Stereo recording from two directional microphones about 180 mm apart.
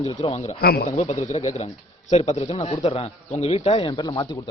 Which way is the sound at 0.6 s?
60° left (ahead or behind).